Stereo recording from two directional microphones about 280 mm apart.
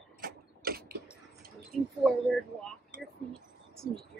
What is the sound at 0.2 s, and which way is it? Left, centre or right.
Mechanisms, right.